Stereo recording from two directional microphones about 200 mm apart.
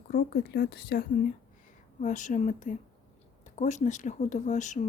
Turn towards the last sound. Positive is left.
turn(degrees=35)  # may be behind; listen again after turning